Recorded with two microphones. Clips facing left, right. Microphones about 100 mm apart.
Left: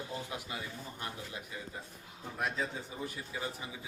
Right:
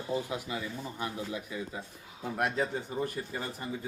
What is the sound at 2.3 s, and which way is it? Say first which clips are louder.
Speech: right 5 dB; 65° right (ahead or behind).